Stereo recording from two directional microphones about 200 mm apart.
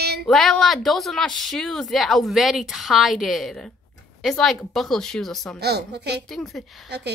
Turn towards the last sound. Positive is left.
turn(degrees=0)  # may be behind; listen again after turning